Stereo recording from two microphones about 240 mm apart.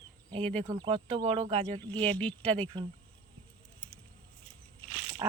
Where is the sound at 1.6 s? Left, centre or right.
Centre.